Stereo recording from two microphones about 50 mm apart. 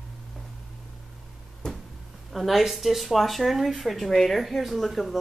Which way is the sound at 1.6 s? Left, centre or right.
Centre.